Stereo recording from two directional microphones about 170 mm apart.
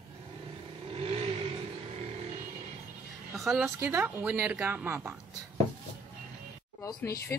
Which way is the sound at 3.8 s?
10° right (ahead or behind).